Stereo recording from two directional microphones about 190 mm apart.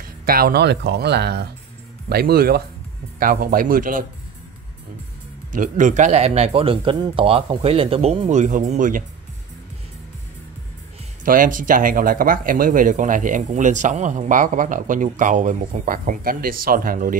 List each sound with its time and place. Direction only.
0.2 s speech: 50° right (ahead or behind)
5.5 s a man's voice: 45° right (ahead or behind)
11.2 s speech: 45° right (ahead or behind)